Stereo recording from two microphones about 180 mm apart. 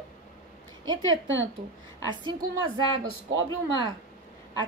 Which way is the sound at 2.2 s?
25° right (ahead or behind).